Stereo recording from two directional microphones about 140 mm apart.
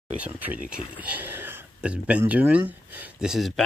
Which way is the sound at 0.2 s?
10° right (ahead or behind).